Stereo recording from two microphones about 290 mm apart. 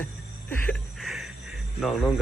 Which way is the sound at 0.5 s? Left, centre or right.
Centre.